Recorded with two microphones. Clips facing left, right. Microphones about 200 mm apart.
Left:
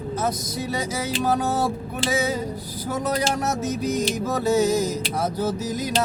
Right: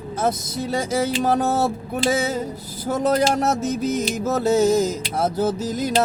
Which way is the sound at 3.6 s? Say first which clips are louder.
Right 2 dB; 10° left (ahead or behind).